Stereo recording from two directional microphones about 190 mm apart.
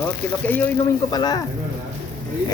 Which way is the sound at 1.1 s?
20° left (ahead or behind).